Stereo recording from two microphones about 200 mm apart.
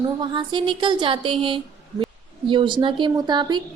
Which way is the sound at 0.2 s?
25° right (ahead or behind).